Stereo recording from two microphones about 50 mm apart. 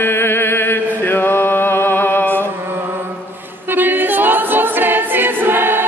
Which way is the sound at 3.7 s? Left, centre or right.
Right.